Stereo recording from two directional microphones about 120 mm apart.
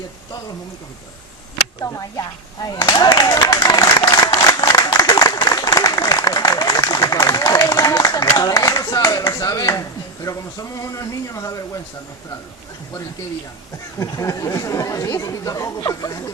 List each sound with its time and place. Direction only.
1.8 s speech: 30° left (ahead or behind)
3.3 s applause: 35° left (ahead or behind)
10.2 s speech: 25° left (ahead or behind)
14.0 s speech: 25° left (ahead or behind)